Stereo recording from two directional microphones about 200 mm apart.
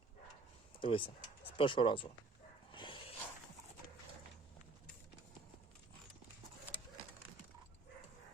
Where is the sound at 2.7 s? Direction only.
25° left (ahead or behind).